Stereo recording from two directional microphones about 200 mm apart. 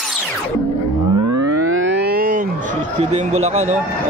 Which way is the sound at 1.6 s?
80° right.